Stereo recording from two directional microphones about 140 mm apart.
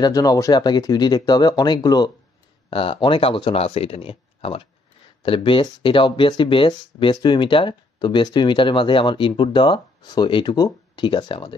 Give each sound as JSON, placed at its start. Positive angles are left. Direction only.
{"t": 0.0, "sound": "speech", "side_deg": 25}
{"t": 2.7, "sound": "speech", "side_deg": 40}